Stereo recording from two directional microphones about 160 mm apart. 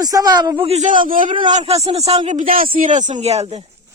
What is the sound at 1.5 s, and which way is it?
Speech, 45° right (ahead or behind).